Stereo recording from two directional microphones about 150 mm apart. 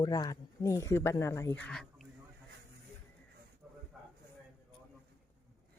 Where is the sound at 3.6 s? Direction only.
5° right (ahead or behind).